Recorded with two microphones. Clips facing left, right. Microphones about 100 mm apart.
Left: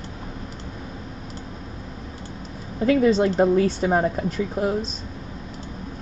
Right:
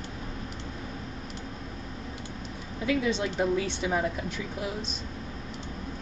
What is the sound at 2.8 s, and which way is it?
A woman's voice, 45° left (ahead or behind).